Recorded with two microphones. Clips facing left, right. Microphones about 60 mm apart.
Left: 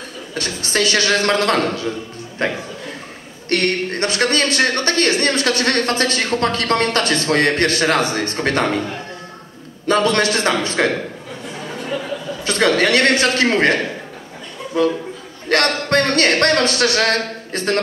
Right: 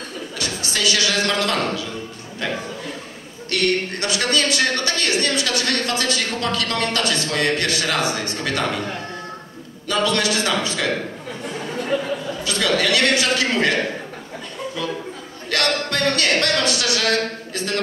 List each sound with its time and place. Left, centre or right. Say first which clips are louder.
0.3 s speech: left 6 dB; left
9.8 s speech: left 4 dB; left
12.4 s speech: left 5 dB; left
15.5 s speech: left 6 dB; left